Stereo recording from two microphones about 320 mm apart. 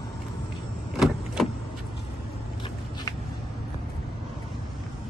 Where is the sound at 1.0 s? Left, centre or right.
Centre.